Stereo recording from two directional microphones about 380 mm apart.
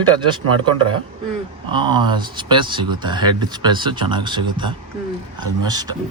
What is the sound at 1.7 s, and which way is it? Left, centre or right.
Speech, centre.